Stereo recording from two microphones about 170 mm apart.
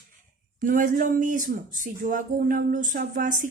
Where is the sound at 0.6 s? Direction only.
50° right (ahead or behind).